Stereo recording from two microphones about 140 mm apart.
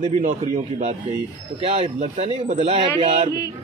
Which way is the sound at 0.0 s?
60° right (ahead or behind).